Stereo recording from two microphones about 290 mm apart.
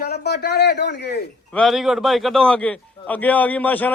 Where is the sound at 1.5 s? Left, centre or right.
Centre.